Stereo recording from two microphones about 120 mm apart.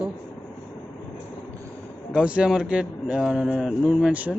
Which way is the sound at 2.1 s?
10° right (ahead or behind).